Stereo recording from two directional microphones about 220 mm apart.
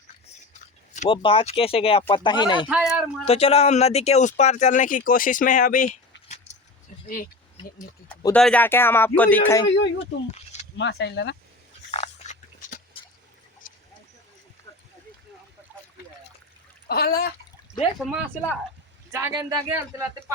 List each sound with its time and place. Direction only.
0.9 s speech: 20° left (ahead or behind)
2.6 s speech: centre (ahead or behind)
3.2 s speech: 25° left (ahead or behind)
6.2 s keys jangling: 30° left (ahead or behind)
8.3 s speech: 5° left (ahead or behind)
9.6 s speech: 55° left (ahead or behind)
10.3 s a sound: 30° left (ahead or behind)
10.8 s speech: 50° left (ahead or behind)
11.9 s a sound: 30° left (ahead or behind)
16.9 s speech: 45° left (ahead or behind)
19.1 s speech: 15° right (ahead or behind)